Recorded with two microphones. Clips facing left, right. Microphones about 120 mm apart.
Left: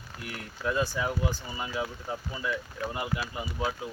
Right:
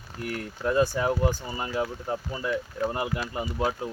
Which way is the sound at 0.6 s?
45° right (ahead or behind).